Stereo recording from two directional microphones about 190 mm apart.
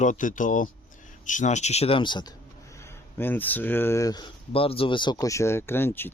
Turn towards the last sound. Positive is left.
turn(degrees=10)  # may be behind; listen again after turning